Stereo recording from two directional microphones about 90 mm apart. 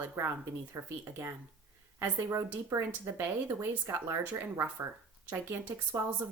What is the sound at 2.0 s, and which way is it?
Speech, 25° right (ahead or behind).